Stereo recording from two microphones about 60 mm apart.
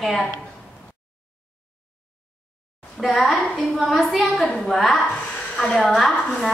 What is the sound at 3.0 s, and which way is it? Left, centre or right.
A woman's voice, centre.